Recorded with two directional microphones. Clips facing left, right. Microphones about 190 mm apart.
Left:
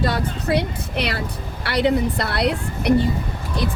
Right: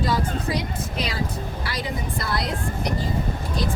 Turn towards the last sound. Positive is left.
turn(degrees=65)  # may be behind; listen again after turning